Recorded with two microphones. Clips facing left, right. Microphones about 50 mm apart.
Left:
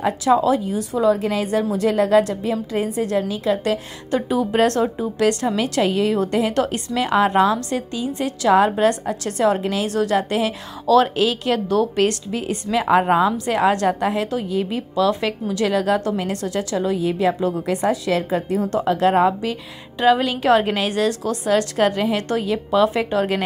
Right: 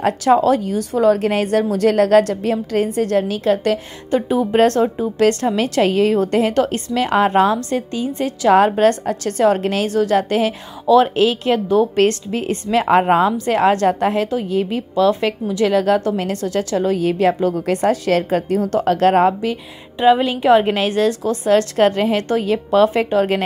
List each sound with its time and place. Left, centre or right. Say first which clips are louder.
0.4 s a woman's voice: right 3 dB; right
4.1 s a woman's voice: right 3 dB; right
4.8 s speech: right 3 dB; centre
5.2 s a woman's voice: right 3 dB; right
9.8 s a woman's voice: right 4 dB; right
12.8 s a woman's voice: right 2 dB; right
17.8 s a woman's voice: right 4 dB; right
19.2 s a woman's voice: right 3 dB; right
20.0 s a woman's voice: right 3 dB; centre